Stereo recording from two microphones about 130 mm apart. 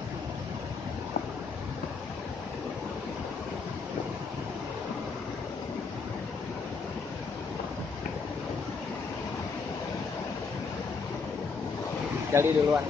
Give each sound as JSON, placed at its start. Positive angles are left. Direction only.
{"t": 12.3, "sound": "speech", "side_deg": -20}